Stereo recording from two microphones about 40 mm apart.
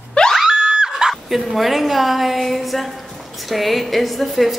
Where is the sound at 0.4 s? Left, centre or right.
Centre.